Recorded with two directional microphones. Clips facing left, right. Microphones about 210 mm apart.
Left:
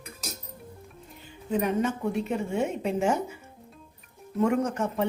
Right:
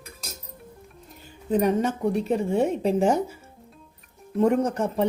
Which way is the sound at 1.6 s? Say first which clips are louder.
Right 3 dB; 35° right (ahead or behind).